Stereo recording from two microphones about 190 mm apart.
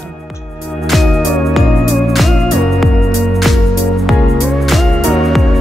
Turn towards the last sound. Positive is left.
turn(degrees=0)  # may be behind; listen again after turning